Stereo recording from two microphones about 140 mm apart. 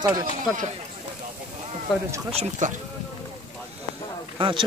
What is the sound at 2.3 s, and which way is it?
Speech, 50° right (ahead or behind).